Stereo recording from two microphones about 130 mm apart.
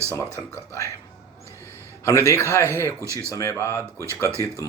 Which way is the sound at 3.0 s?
20° right (ahead or behind).